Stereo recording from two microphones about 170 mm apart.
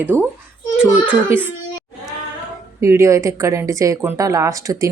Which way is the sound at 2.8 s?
15° right (ahead or behind).